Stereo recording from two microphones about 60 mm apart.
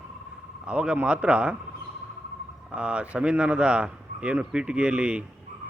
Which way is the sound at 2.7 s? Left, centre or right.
Centre.